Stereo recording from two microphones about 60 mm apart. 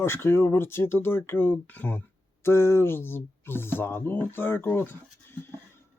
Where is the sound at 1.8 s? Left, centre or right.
Left.